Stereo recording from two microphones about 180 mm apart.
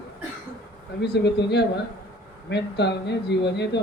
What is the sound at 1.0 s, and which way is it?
Speech, 70° left (ahead or behind).